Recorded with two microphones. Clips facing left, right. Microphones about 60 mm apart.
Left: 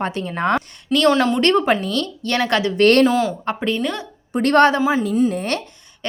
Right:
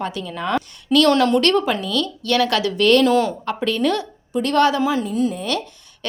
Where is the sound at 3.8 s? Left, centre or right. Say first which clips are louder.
Right 4 dB; centre.